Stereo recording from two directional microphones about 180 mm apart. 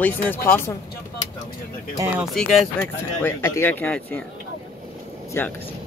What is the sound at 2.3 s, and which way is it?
Speech, centre (ahead or behind).